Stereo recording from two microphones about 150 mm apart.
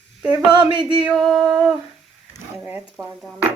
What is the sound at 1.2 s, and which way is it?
Speech, centre (ahead or behind).